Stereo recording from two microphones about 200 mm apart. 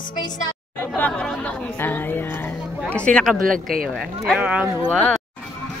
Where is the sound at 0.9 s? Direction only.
5° left (ahead or behind).